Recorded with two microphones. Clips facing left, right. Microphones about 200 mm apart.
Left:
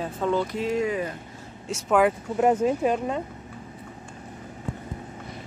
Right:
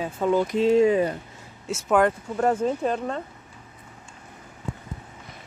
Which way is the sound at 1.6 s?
Centre (ahead or behind).